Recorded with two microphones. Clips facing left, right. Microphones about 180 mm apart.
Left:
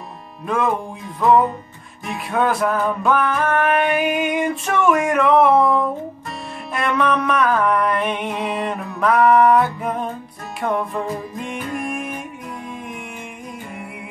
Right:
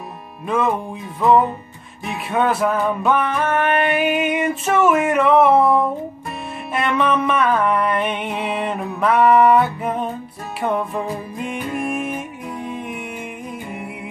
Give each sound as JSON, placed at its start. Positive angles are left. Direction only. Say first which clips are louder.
{"t": 2.0, "sound": "music", "louder": "right 1 dB", "side_deg": 0}